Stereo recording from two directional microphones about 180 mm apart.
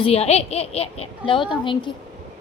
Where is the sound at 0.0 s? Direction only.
35° left (ahead or behind).